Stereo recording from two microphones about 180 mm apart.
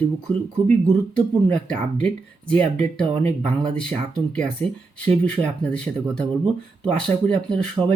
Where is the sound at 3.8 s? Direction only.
5° left (ahead or behind).